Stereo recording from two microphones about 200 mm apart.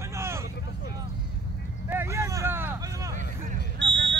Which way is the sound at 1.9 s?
15° right (ahead or behind).